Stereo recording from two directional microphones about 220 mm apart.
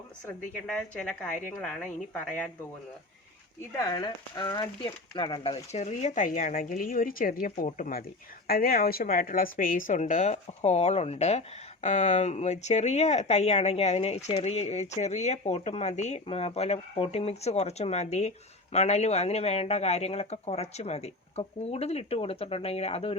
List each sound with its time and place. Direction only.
0.3 s a woman's voice: 5° left (ahead or behind)
3.8 s a woman's voice: 20° left (ahead or behind)